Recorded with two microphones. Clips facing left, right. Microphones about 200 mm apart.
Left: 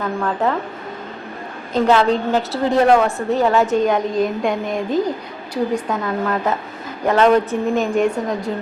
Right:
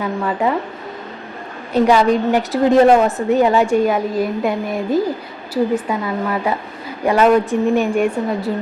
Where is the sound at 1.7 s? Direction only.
10° right (ahead or behind).